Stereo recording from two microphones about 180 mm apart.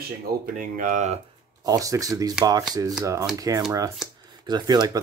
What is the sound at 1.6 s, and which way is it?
Speech, 20° right (ahead or behind).